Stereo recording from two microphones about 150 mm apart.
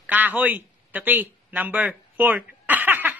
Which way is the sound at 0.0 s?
10° right (ahead or behind).